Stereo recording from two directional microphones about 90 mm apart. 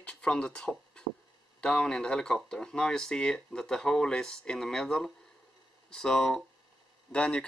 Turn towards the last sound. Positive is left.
turn(degrees=10)  # may be behind; listen again after turning